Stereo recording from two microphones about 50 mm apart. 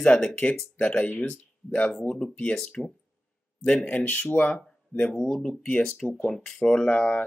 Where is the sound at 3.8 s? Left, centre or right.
Left.